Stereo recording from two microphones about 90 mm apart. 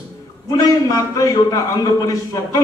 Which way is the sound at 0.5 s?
45° left (ahead or behind).